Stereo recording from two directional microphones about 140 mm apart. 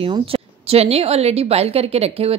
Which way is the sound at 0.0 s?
40° right (ahead or behind).